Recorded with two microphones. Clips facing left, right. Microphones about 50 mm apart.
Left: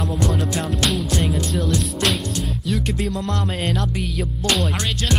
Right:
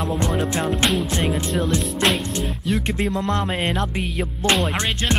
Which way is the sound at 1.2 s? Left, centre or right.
Centre.